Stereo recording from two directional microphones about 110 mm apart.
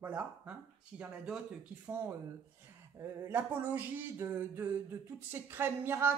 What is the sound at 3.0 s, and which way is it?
Speech, 20° right (ahead or behind).